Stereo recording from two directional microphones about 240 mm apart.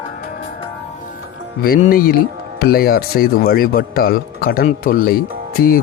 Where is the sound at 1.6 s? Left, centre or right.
Left.